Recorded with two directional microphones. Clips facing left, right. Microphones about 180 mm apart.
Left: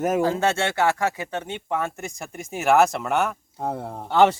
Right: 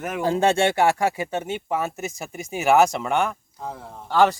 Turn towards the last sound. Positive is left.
turn(degrees=25)  # may be behind; listen again after turning